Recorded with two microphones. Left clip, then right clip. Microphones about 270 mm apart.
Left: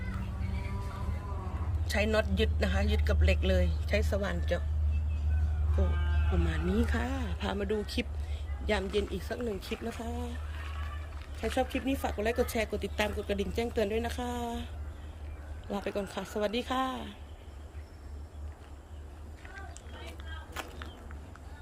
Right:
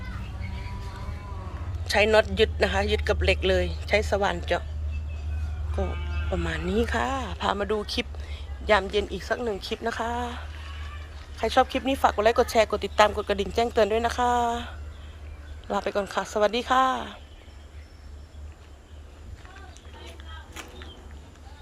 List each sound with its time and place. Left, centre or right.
1.8 s speech: centre
6.4 s speech: centre
20.5 s a sound: centre